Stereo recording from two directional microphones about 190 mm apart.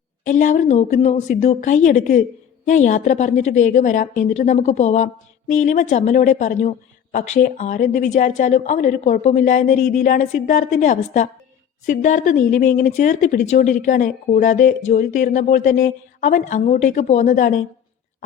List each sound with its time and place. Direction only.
0.3 s a woman's voice: 40° left (ahead or behind)